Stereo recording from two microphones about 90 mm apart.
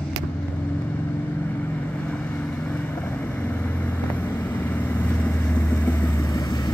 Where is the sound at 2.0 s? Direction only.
15° left (ahead or behind).